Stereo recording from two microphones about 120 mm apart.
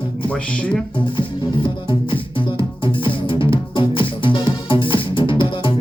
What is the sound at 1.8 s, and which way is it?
Music, 45° left (ahead or behind).